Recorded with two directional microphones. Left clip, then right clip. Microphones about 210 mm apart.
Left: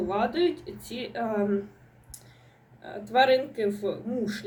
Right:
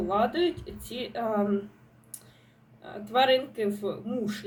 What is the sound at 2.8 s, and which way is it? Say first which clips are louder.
Speech: left 2 dB; 5° right (ahead or behind).